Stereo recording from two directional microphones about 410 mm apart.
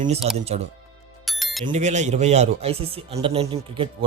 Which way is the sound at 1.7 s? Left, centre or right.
Centre.